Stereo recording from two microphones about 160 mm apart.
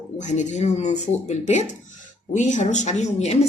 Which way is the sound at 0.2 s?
50° left (ahead or behind).